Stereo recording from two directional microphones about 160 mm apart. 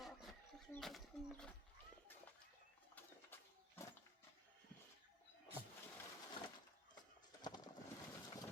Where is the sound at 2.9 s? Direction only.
15° left (ahead or behind).